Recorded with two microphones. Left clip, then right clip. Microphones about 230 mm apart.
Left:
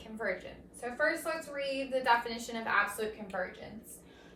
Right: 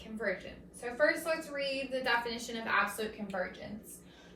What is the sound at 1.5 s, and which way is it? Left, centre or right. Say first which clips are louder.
A woman's voice: left 1 dB; centre.